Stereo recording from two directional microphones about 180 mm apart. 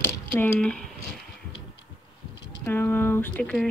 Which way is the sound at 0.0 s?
10° left (ahead or behind).